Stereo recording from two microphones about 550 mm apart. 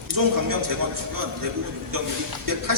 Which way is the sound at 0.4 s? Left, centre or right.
Right.